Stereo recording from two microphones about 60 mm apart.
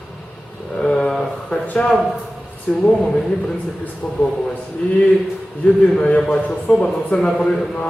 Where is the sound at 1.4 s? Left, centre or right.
Left.